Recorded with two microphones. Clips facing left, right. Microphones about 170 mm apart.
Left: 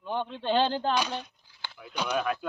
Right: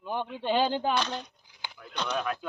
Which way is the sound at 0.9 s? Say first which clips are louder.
Left 1 dB; 10° left (ahead or behind).